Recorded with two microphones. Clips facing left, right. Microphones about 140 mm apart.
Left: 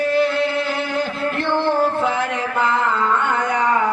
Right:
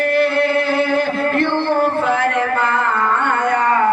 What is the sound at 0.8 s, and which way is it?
Music, 55° right (ahead or behind).